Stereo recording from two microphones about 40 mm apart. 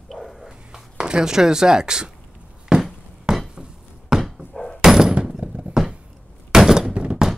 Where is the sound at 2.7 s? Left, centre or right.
Centre.